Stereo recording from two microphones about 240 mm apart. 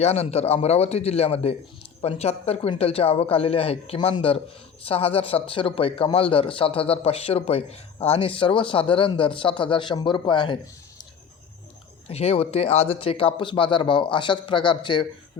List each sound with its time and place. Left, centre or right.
0.0 s a man's voice: left
12.0 s a man's voice: left